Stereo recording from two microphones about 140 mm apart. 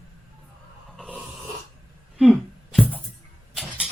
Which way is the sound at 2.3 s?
Centre (ahead or behind).